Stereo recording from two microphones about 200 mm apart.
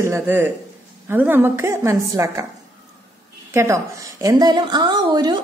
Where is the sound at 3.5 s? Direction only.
15° right (ahead or behind).